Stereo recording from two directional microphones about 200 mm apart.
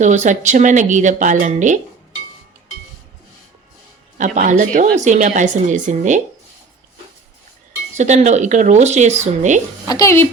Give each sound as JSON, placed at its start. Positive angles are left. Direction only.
{"t": 0.0, "sound": "speech", "side_deg": -35}
{"t": 4.4, "sound": "speech", "side_deg": -40}
{"t": 7.9, "sound": "speech", "side_deg": -35}
{"t": 9.8, "sound": "speech", "side_deg": 15}